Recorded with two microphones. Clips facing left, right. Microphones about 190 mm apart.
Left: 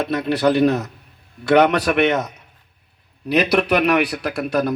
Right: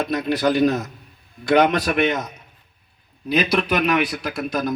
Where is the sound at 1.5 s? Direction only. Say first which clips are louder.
Left 2 dB; 70° left (ahead or behind).